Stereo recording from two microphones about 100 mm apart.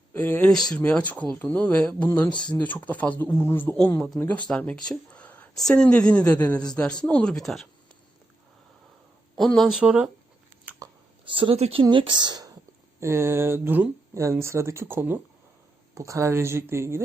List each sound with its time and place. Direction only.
0.2 s speech: 15° left (ahead or behind)
9.4 s speech: centre (ahead or behind)
11.3 s speech: 60° right (ahead or behind)
13.0 s speech: 25° right (ahead or behind)